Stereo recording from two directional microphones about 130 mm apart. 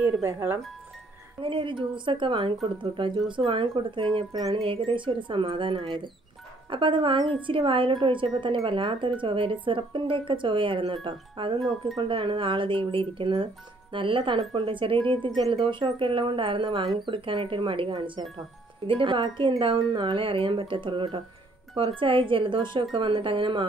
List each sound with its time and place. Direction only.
0.2 s speech: 15° right (ahead or behind)
1.4 s speech: 40° right (ahead or behind)